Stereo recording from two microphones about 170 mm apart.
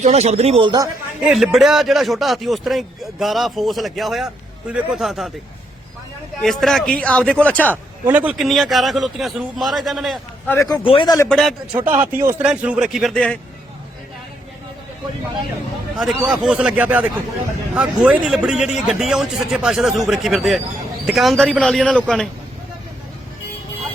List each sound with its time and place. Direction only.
0.0 s speech: 40° right (ahead or behind)
1.2 s a man's voice: centre (ahead or behind)
6.4 s a man's voice: centre (ahead or behind)
8.0 s a man's voice: 10° right (ahead or behind)
10.5 s a man's voice: 15° left (ahead or behind)
10.8 s speech: 30° left (ahead or behind)
11.3 s a man's voice: centre (ahead or behind)
11.8 s a man's voice: 10° right (ahead or behind); by 13.4 s 5° left (ahead or behind)
16.0 s a man's voice: 5° right (ahead or behind)